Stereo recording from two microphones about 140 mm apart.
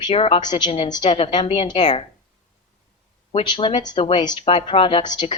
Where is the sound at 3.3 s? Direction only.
35° left (ahead or behind).